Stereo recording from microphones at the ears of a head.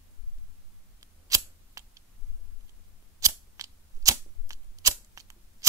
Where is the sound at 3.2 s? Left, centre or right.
Right.